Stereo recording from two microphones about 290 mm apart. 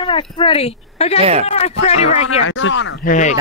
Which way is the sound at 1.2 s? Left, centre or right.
Right.